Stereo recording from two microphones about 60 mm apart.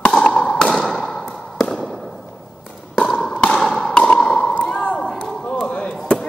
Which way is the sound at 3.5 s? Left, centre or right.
Centre.